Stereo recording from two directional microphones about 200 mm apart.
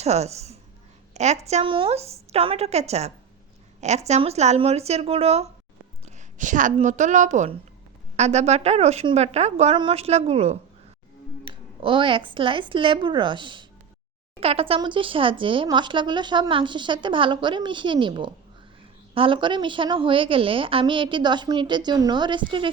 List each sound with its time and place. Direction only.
0.0 s a woman's voice: 35° right (ahead or behind)